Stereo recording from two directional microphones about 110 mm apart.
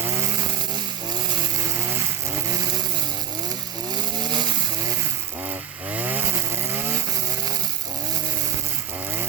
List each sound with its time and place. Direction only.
3.9 s chainsaw: 40° right (ahead or behind)
5.5 s chainsaw: 15° right (ahead or behind)